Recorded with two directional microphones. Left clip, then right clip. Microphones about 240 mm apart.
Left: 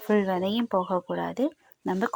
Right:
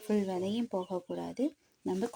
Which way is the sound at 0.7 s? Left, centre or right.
Centre.